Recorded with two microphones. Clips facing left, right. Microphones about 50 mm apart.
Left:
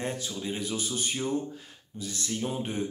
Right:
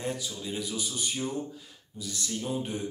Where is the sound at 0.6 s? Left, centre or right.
Left.